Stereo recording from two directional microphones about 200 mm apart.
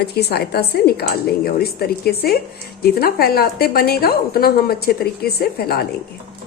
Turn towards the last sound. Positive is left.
turn(degrees=50)  # may be behind; listen again after turning